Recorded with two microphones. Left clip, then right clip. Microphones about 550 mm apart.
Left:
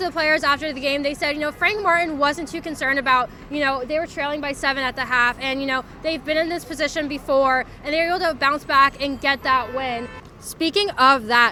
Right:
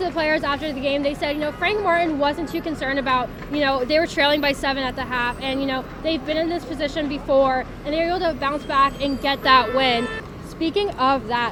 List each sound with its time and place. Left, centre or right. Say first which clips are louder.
0.0 s a woman's voice: left 2 dB; left
4.6 s a woman's voice: left 2 dB; left
10.6 s speech: left 3 dB; left